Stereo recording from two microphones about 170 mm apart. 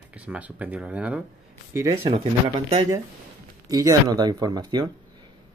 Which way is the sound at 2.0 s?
35° right (ahead or behind).